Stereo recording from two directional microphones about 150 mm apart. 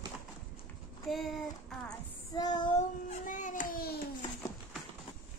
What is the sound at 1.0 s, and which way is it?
Speech, centre (ahead or behind).